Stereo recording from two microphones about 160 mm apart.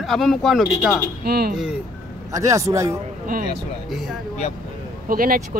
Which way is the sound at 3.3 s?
65° right (ahead or behind).